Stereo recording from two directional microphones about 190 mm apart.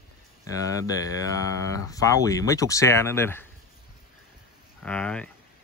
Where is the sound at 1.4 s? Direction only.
15° left (ahead or behind).